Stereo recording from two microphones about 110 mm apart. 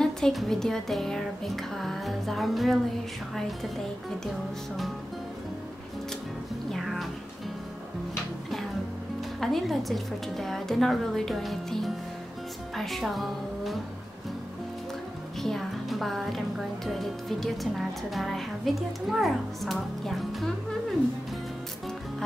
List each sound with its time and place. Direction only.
0.0 s speech: centre (ahead or behind)
6.7 s music: centre (ahead or behind)
9.4 s speech: centre (ahead or behind)
15.4 s speech: centre (ahead or behind)